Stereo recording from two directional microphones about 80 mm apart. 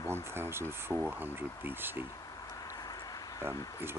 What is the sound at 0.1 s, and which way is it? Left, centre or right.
Speech, right.